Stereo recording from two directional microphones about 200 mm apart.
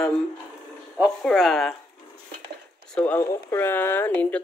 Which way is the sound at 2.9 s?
10° left (ahead or behind).